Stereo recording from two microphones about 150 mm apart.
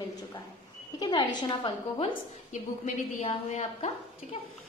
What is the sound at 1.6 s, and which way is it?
Speech, 35° left (ahead or behind).